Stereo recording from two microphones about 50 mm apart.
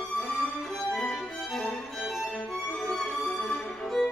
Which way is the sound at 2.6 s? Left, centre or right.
Centre.